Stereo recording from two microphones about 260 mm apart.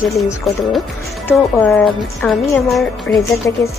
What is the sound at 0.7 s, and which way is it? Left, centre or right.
Speech, centre.